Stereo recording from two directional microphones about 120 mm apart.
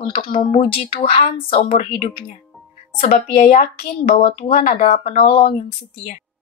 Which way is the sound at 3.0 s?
80° left.